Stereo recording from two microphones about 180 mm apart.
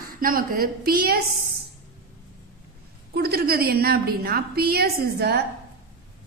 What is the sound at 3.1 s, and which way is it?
A woman's voice, 60° right (ahead or behind).